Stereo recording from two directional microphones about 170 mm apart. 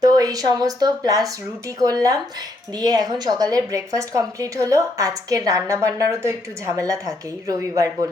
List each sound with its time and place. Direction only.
0.0 s a woman's voice: 20° right (ahead or behind)